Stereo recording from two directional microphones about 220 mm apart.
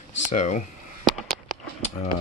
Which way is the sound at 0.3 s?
35° left (ahead or behind).